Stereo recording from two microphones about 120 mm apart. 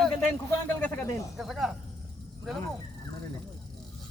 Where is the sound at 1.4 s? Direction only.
Centre (ahead or behind).